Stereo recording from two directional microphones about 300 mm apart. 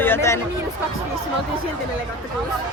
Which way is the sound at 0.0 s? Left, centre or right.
Centre.